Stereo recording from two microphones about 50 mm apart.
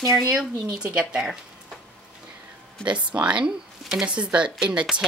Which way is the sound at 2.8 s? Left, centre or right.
Right.